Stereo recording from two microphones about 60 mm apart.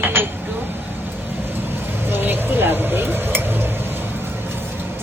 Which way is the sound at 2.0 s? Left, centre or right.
Right.